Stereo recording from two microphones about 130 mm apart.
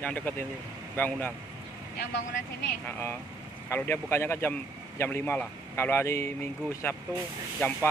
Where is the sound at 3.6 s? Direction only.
15° left (ahead or behind).